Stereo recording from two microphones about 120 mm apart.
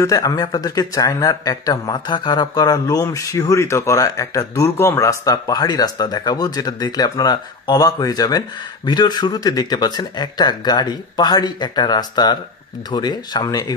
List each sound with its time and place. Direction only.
0.0 s speech: 30° left (ahead or behind)